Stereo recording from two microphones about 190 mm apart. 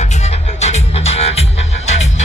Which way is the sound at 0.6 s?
35° left (ahead or behind).